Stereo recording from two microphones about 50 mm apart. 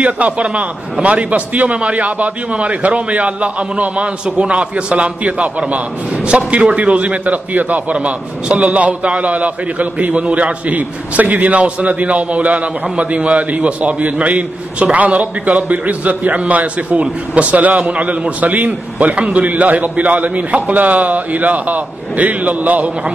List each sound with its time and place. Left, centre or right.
0.0 s a man's voice: right